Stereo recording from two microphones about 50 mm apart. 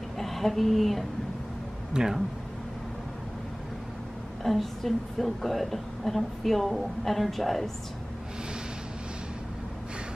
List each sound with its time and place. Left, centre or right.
0.2 s speech: centre
1.9 s speech: centre
4.4 s a woman's voice: centre